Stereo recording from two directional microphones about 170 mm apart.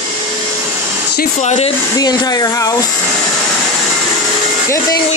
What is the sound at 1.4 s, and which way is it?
Speech, 40° left (ahead or behind).